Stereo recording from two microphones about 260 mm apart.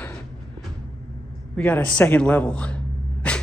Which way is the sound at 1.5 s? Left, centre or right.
Centre.